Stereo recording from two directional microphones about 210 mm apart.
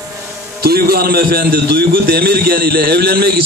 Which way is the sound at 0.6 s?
45° right (ahead or behind).